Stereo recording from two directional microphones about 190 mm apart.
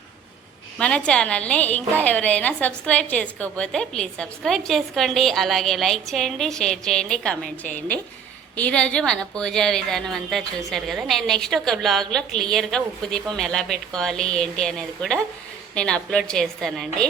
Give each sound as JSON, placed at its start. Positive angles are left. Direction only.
{"t": 0.8, "sound": "a woman's voice", "side_deg": 5}